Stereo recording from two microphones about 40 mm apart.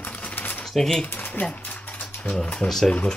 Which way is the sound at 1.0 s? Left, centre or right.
Left.